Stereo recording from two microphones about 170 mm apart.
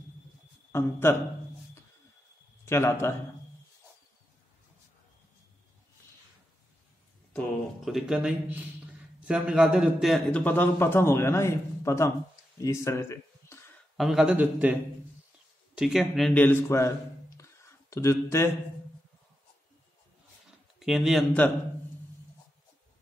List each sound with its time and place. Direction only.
0.7 s a man's voice: 15° left (ahead or behind)
2.6 s a man's voice: 15° left (ahead or behind)
7.3 s a man's voice: centre (ahead or behind); by 13.6 s 15° left (ahead or behind)
13.9 s a man's voice: centre (ahead or behind); by 16.9 s 15° left (ahead or behind)
17.4 s a sound: 15° left (ahead or behind)
20.8 s speech: centre (ahead or behind)